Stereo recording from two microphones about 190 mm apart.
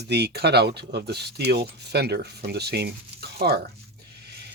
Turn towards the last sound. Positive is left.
turn(degrees=-60)  # may be behind; listen again after turning